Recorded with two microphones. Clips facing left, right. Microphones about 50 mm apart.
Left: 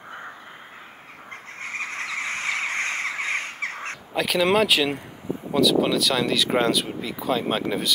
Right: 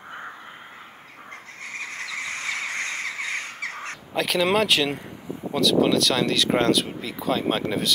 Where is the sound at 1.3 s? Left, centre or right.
Left.